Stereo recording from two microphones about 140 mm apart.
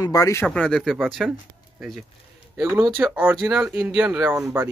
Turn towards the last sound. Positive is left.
turn(degrees=-10)  # may be behind; listen again after turning